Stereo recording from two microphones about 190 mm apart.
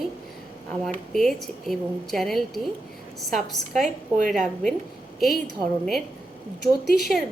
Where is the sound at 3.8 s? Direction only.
45° right (ahead or behind).